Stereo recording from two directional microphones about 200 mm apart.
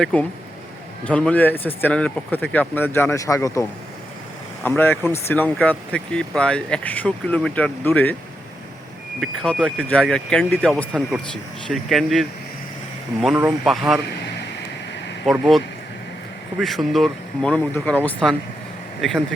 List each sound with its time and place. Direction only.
0.0 s speech: 5° left (ahead or behind)
9.2 s speech: 5° left (ahead or behind)
13.7 s speech: centre (ahead or behind)
15.3 s speech: centre (ahead or behind)